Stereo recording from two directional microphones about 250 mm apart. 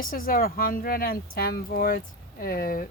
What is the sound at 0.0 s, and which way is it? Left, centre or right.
Speech, left.